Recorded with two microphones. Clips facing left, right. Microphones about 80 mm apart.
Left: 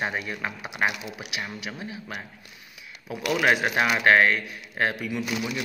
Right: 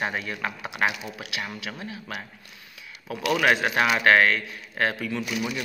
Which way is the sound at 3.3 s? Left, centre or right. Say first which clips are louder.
Even; centre.